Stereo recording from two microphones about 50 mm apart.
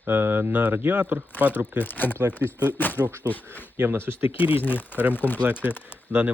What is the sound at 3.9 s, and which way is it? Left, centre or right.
Speech, right.